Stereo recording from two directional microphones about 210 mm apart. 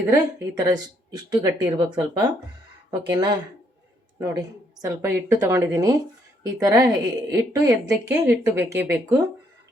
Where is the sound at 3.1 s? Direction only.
20° right (ahead or behind).